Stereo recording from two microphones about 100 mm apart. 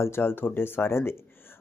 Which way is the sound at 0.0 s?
25° left (ahead or behind).